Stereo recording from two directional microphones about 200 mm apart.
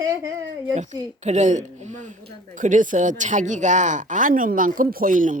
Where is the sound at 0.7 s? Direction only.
35° right (ahead or behind).